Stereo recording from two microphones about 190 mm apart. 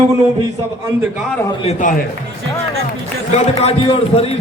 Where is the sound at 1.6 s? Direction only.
45° left (ahead or behind).